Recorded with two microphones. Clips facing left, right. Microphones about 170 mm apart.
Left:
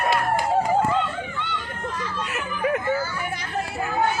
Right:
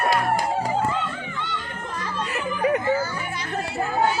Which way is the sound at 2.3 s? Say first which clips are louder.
Right 3 dB; centre (ahead or behind).